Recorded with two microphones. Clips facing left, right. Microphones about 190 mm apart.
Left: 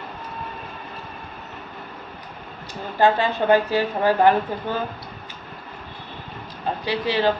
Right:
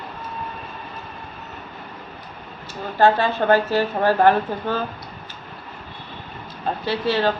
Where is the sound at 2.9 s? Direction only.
15° left (ahead or behind).